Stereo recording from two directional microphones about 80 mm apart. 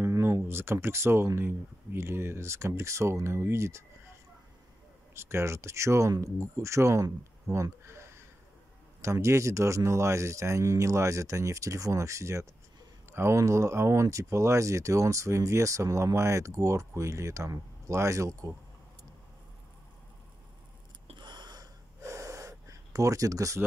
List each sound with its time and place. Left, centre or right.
0.0 s speech: right
5.1 s speech: right
21.2 s gasp: right
22.0 s gasp: right